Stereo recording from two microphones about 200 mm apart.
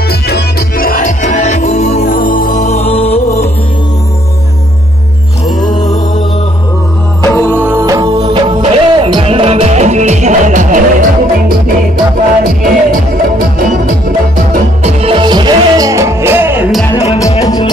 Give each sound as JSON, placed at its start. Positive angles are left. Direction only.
{"t": 0.1, "sound": "music", "side_deg": 50}
{"t": 7.2, "sound": "music", "side_deg": 10}
{"t": 7.6, "sound": "music", "side_deg": -15}
{"t": 14.8, "sound": "music", "side_deg": -30}
{"t": 16.9, "sound": "music", "side_deg": 30}